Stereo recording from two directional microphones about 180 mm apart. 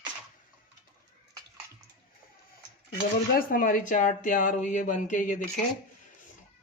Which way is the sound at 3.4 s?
50° left (ahead or behind).